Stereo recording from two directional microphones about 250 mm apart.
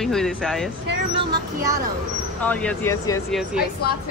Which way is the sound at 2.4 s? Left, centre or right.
Centre.